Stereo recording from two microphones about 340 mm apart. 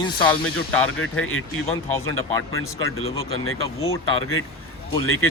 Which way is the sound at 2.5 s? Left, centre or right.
Left.